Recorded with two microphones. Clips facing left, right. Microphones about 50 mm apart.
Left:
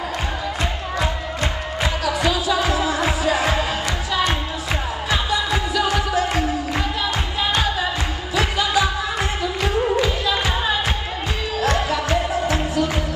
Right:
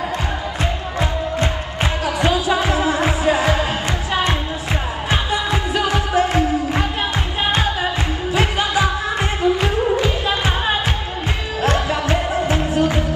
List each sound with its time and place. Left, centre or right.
0.9 s music: right
8.4 s music of asia: right
11.6 s music: right